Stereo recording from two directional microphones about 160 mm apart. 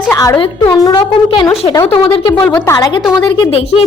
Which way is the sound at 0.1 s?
20° left (ahead or behind).